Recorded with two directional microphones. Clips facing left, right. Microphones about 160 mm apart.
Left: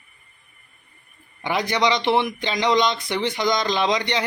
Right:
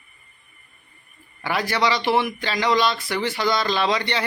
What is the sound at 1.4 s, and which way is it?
A man's voice, 20° left (ahead or behind).